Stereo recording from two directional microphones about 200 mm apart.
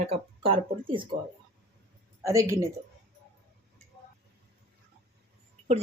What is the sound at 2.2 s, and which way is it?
Speech, 15° right (ahead or behind).